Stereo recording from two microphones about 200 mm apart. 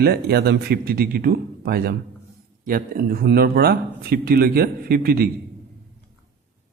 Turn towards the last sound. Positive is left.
turn(degrees=-50)  # may be behind; listen again after turning